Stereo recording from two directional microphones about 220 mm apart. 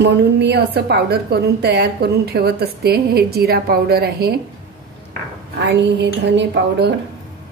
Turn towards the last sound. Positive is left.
turn(degrees=-50)  # may be behind; listen again after turning